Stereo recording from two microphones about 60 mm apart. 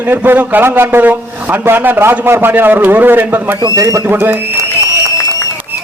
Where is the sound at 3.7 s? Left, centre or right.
Right.